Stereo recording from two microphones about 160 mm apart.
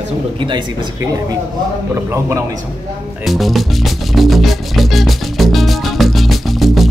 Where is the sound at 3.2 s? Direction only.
Centre (ahead or behind).